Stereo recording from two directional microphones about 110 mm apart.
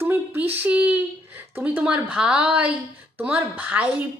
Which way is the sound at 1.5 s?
15° right (ahead or behind).